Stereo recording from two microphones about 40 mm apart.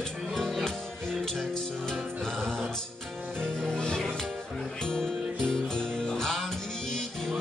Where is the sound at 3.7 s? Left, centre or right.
Centre.